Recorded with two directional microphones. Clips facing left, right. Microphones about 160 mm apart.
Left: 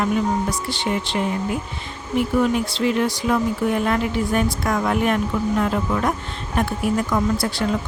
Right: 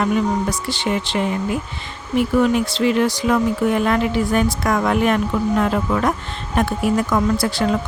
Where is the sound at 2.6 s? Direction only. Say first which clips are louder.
Right 3 dB; 90° right.